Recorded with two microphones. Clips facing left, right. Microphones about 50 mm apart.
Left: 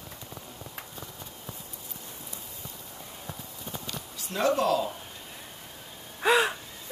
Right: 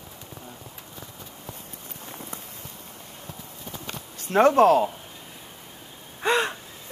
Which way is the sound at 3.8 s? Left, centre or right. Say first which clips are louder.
Right 3 dB; right.